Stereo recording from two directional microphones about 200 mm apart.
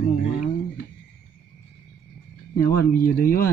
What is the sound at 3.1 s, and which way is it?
Speech, 50° left (ahead or behind).